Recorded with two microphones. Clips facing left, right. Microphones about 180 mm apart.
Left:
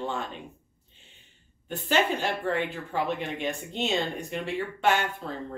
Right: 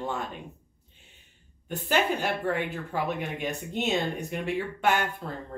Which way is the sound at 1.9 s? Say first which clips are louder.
Even; 10° right (ahead or behind).